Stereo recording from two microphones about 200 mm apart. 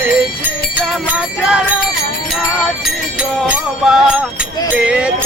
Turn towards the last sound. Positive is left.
turn(degrees=-5)  # may be behind; listen again after turning